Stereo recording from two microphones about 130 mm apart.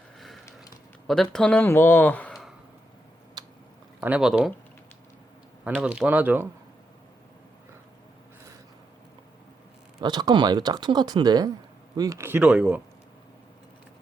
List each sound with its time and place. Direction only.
0.2 s a sound: centre (ahead or behind)
1.0 s speech: 5° left (ahead or behind)
3.4 s chewing: 30° right (ahead or behind)
4.0 s speech: 10° right (ahead or behind)
5.8 s speech: 10° right (ahead or behind)
10.0 s speech: 35° right (ahead or behind); by 12.5 s 15° right (ahead or behind)
12.5 s speech: 5° right (ahead or behind)